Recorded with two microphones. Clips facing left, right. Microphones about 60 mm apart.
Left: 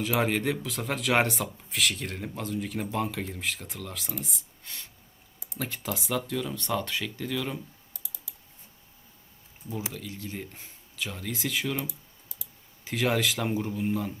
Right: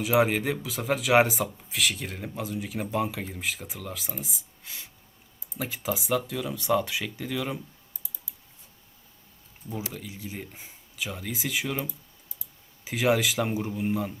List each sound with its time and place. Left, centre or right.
0.0 s speech: centre
7.9 s typing: left
9.9 s speech: centre